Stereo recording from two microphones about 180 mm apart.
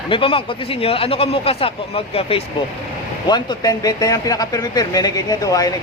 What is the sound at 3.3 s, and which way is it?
Speech, 25° left (ahead or behind).